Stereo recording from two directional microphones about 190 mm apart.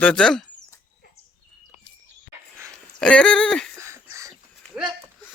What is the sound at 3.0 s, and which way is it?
Speech, 5° left (ahead or behind).